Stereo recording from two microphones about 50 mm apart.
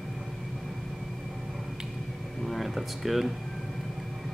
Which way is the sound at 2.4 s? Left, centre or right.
Centre.